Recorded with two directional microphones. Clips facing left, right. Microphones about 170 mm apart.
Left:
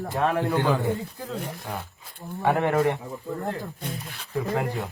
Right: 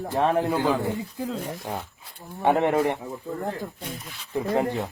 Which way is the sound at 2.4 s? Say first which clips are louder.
Right 1 dB; 20° right (ahead or behind).